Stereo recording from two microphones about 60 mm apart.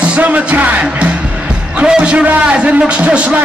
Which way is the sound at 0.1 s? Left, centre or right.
Right.